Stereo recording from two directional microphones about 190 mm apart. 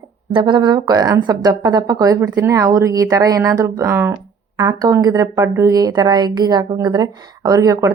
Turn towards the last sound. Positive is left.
turn(degrees=-20)  # may be behind; listen again after turning